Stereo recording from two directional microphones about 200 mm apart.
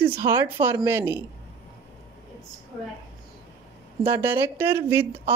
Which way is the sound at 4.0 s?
10° right (ahead or behind).